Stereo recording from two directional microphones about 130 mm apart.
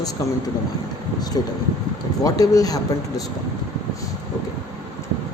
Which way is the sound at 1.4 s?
30° left (ahead or behind).